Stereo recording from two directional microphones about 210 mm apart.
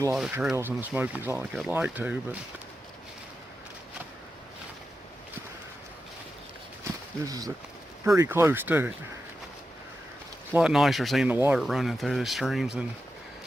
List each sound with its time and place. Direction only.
0.1 s speech: 5° right (ahead or behind)
7.3 s speech: 15° right (ahead or behind)
10.5 s speech: 5° right (ahead or behind)